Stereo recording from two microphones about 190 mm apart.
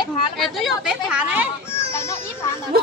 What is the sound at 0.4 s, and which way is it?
Speech, centre (ahead or behind).